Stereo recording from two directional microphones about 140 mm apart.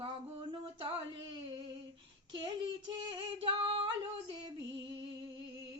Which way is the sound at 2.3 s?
35° right (ahead or behind).